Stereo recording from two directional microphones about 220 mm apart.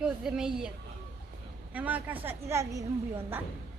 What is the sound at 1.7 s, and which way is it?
A woman's voice, 5° right (ahead or behind).